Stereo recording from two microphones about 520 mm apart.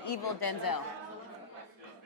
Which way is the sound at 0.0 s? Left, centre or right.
Left.